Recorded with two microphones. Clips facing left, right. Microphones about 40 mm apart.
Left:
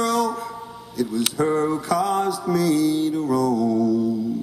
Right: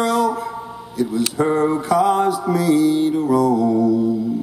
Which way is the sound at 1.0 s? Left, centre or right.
Right.